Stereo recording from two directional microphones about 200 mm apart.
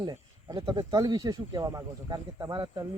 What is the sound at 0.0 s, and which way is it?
Speech, 20° right (ahead or behind).